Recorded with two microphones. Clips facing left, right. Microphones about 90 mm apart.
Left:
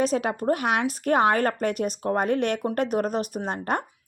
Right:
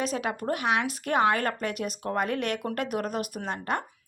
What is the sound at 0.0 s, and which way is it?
Speech, 35° left (ahead or behind).